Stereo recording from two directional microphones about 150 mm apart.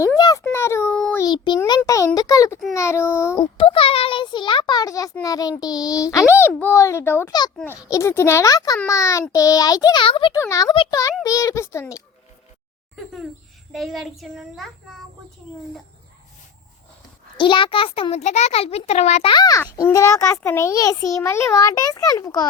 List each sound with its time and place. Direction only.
0.0 s a sound: 25° left (ahead or behind)
1.2 s a child's voice: 25° left (ahead or behind)
1.8 s a child's voice: 15° left (ahead or behind)
3.3 s a child's voice: 35° left (ahead or behind)
10.3 s a child's voice: 20° left (ahead or behind)
13.7 s a child's voice: centre (ahead or behind)
17.3 s a child's voice: 35° left (ahead or behind)
19.3 s a child's voice: 25° left (ahead or behind)